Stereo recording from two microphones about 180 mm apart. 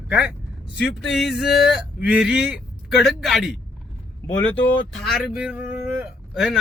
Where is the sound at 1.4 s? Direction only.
65° left (ahead or behind).